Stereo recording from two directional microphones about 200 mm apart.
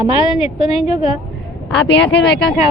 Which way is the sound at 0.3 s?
30° left (ahead or behind).